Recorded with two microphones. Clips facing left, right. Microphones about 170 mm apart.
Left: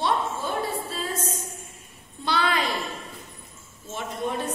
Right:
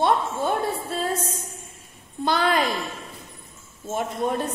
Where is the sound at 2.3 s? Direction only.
50° right (ahead or behind).